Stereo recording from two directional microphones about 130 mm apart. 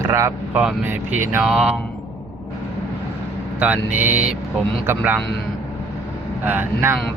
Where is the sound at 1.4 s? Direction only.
5° right (ahead or behind).